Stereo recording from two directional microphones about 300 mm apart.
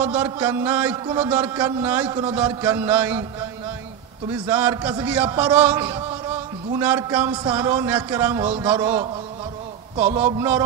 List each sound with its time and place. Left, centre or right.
0.0 s a man's voice: centre
9.9 s a man's voice: right
10.2 s a man's voice: centre